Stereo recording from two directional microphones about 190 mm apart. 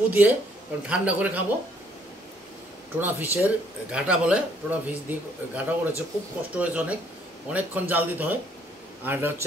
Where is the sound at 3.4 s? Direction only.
5° right (ahead or behind).